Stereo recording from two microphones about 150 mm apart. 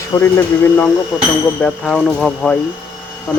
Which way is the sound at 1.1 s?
5° right (ahead or behind).